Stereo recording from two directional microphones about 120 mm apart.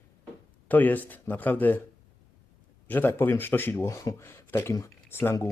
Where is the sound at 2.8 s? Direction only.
15° left (ahead or behind).